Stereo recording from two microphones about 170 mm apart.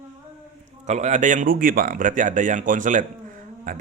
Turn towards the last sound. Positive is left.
turn(degrees=-50)  # may be behind; listen again after turning